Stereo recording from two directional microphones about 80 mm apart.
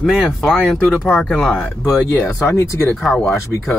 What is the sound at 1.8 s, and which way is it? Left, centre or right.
Speech, left.